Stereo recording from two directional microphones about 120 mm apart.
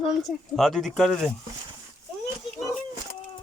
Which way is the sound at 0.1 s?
Centre (ahead or behind).